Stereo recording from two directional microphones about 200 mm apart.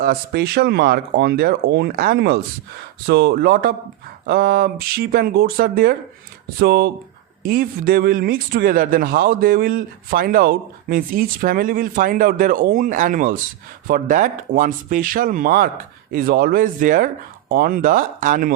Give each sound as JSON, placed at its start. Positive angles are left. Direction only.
{"t": 0.0, "sound": "speech", "side_deg": -50}